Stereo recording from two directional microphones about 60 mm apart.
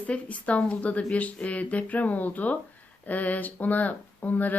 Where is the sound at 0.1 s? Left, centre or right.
Left.